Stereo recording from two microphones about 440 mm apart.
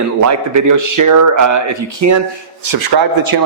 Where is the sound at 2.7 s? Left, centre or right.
Right.